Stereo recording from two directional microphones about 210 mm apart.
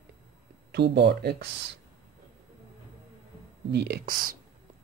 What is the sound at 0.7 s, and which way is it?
Speech, 55° right (ahead or behind).